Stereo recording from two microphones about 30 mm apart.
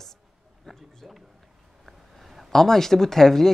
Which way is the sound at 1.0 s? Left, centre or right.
Centre.